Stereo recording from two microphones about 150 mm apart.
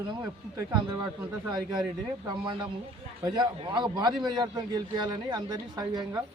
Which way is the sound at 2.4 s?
30° right (ahead or behind).